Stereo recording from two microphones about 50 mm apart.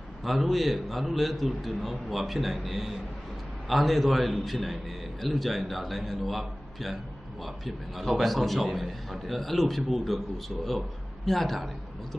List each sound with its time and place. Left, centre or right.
0.2 s a man's voice: centre